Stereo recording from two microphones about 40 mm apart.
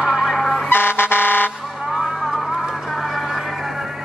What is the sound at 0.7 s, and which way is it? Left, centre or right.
Air horn, left.